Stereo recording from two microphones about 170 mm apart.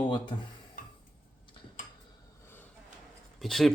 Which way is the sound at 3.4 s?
Centre (ahead or behind).